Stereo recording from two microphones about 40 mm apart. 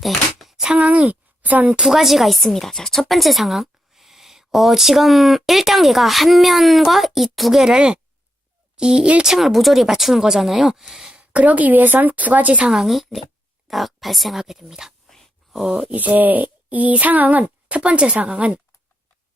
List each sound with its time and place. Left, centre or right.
0.3 s a sound: centre
0.8 s a woman's voice: right
1.8 s speech: centre
3.1 s a woman's voice: centre
7.5 s speech: centre
9.2 s speech: centre
11.1 s speech: right
12.7 s speech: centre
15.9 s speech: right